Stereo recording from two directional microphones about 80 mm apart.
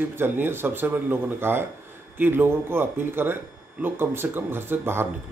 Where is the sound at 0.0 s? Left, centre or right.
Right.